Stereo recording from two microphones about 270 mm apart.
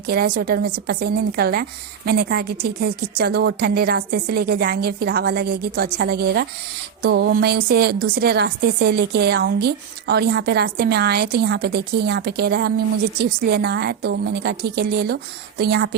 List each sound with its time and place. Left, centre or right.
0.1 s a woman's voice: right